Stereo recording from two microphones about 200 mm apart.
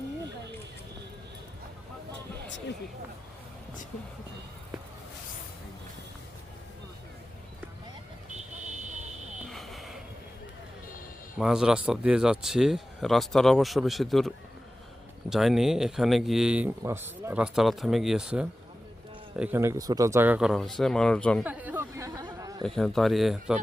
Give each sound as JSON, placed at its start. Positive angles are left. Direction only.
{"t": 9.5, "sound": "a sound", "side_deg": 0}
{"t": 11.3, "sound": "speech", "side_deg": -5}
{"t": 21.4, "sound": "chatter", "side_deg": -10}
{"t": 22.6, "sound": "speech", "side_deg": 0}